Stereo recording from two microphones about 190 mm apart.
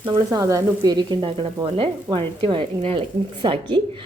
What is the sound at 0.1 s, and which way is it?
Frying, 25° right (ahead or behind).